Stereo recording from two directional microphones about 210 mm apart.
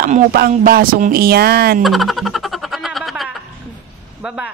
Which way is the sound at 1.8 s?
Centre (ahead or behind).